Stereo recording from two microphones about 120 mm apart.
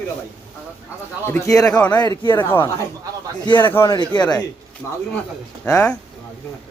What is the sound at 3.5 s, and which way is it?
Speech, 40° left (ahead or behind).